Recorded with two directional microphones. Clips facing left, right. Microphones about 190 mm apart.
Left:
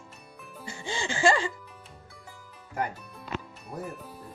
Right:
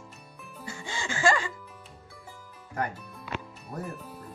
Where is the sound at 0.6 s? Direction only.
25° left (ahead or behind).